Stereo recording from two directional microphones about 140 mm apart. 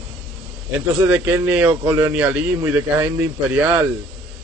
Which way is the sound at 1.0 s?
15° right (ahead or behind).